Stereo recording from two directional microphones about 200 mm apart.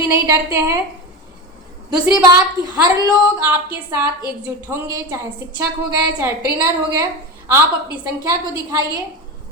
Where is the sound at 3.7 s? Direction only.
10° right (ahead or behind).